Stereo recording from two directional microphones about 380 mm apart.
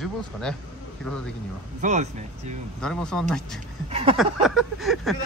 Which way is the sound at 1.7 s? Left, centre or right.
Centre.